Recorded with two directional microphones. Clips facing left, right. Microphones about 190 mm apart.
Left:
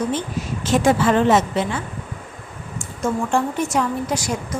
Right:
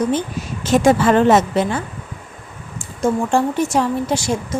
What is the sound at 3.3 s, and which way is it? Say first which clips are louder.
Speech: right 3 dB; 30° right (ahead or behind).